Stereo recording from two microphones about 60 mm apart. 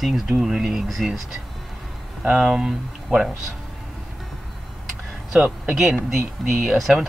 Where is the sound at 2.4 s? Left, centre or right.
Centre.